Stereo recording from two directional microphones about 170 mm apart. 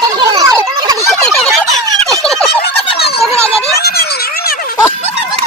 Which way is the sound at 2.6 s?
70° left (ahead or behind).